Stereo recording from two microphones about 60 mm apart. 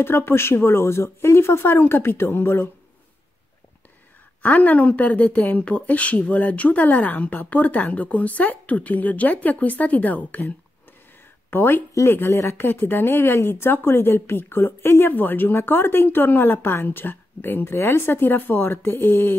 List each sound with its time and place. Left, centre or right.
0.0 s speech: left
4.4 s speech: left
11.5 s speech: left
11.9 s speech: left